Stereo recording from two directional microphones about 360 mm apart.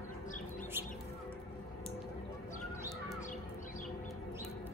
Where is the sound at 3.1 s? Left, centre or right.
Left.